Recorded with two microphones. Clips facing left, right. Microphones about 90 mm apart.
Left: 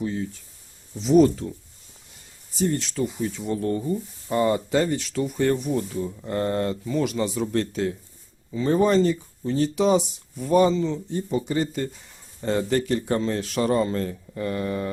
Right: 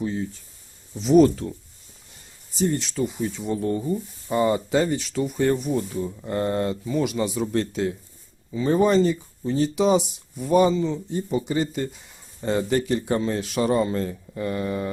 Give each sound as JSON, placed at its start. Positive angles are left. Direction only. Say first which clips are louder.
{"t": 1.0, "sound": "speech", "louder": "right 1 dB", "side_deg": -75}
{"t": 2.9, "sound": "speech", "louder": "right 1 dB", "side_deg": -10}